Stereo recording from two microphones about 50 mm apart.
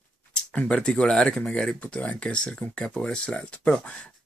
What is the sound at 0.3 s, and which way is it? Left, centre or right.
Speech, left.